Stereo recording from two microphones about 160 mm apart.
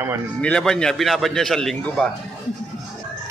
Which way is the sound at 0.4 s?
5° left (ahead or behind).